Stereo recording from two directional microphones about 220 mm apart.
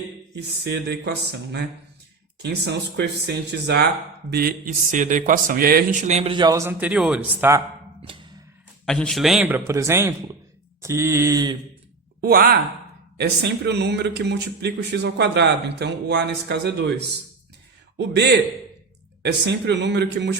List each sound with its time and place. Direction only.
0.3 s speech: 50° right (ahead or behind)
2.4 s speech: 50° right (ahead or behind); by 7.6 s 10° right (ahead or behind)
8.0 s music: 20° right (ahead or behind)
8.9 s a man's voice: 5° left (ahead or behind); by 11.5 s 15° right (ahead or behind)
12.2 s speech: 40° right (ahead or behind)
17.9 s a man's voice: 50° right (ahead or behind)